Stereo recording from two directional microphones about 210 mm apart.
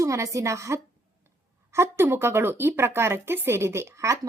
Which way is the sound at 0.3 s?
15° right (ahead or behind).